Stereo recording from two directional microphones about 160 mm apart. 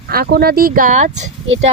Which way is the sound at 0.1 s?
70° right (ahead or behind).